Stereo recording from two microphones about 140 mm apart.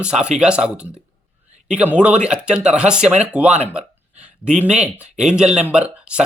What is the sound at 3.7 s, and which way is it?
Hiccup, 5° right (ahead or behind).